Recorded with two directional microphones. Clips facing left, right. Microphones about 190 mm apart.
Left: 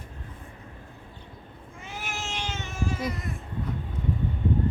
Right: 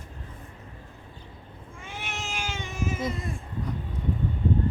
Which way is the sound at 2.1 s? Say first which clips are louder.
Even; 5° right (ahead or behind).